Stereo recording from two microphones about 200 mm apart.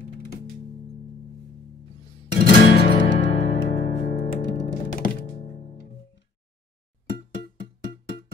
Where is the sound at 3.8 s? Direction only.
40° left (ahead or behind).